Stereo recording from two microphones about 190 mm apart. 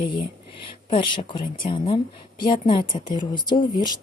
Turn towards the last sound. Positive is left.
turn(degrees=25)  # may be behind; listen again after turning